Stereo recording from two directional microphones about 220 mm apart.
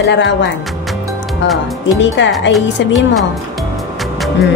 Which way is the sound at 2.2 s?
55° left (ahead or behind).